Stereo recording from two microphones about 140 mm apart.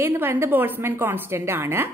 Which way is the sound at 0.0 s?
15° right (ahead or behind).